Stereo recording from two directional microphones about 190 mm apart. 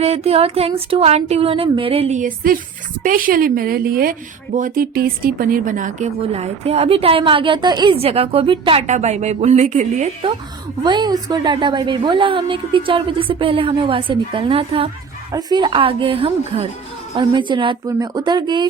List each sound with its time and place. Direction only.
0.0 s a woman's voice: 35° right (ahead or behind)
10.8 s a woman's voice: 25° right (ahead or behind)